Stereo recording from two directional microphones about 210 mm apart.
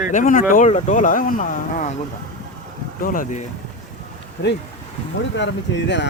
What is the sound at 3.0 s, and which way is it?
Speech, 40° left (ahead or behind).